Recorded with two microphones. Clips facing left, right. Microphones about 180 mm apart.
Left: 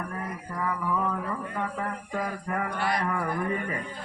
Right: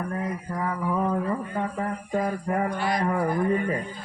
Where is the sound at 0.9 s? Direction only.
30° right (ahead or behind).